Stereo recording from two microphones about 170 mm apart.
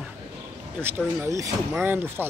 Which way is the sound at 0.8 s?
5° left (ahead or behind).